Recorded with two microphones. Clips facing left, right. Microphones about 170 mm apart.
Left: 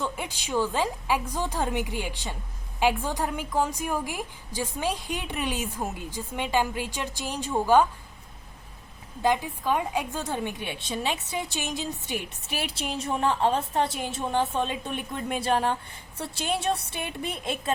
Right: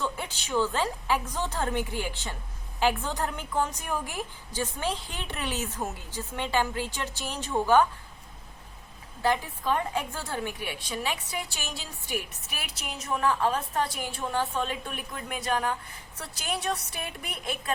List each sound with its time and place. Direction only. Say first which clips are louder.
0.0 s a woman's voice: left 1 dB; 15° left (ahead or behind)
9.2 s a woman's voice: left 2 dB; 15° left (ahead or behind)